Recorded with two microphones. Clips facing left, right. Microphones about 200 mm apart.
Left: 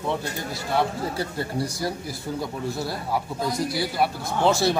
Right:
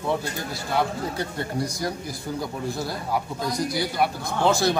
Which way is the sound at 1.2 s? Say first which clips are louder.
Left 1 dB; 5° left (ahead or behind).